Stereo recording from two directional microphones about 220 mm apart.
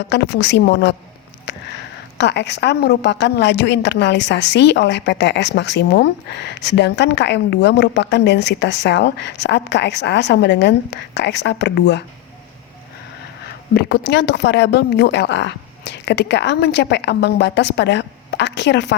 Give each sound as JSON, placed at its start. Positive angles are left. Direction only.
{"t": 0.1, "sound": "a woman's voice", "side_deg": 50}
{"t": 2.1, "sound": "a woman's voice", "side_deg": 50}
{"t": 13.7, "sound": "a woman's voice", "side_deg": 45}